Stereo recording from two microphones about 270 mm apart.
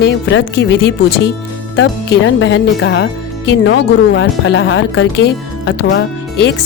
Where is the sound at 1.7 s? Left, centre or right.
Left.